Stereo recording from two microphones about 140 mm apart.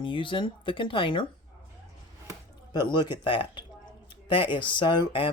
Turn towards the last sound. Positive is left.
turn(degrees=35)  # may be behind; listen again after turning